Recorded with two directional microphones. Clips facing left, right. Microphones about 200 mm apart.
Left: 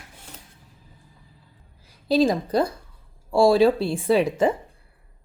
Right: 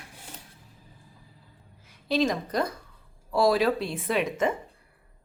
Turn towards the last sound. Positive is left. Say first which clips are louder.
# left 6 dB
turn(degrees=30)  # may be behind; listen again after turning